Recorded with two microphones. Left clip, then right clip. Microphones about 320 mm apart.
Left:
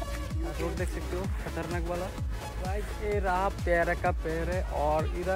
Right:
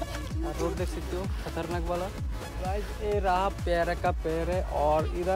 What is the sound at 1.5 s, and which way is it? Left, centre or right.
Speech, centre.